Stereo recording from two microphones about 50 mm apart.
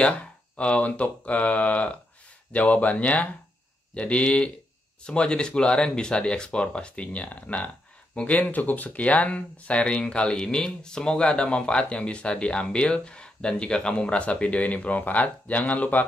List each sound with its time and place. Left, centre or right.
0.6 s speech: left